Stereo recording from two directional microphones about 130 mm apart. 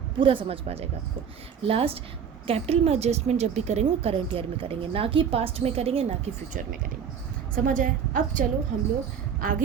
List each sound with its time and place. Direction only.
0.2 s speech: 40° right (ahead or behind)
7.5 s a woman's voice: 90° right